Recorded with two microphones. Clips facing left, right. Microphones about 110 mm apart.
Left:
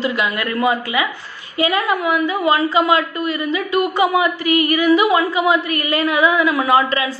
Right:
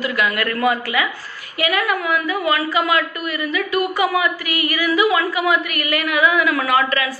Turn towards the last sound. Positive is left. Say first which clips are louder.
# left 3 dB
turn(degrees=25)  # may be behind; listen again after turning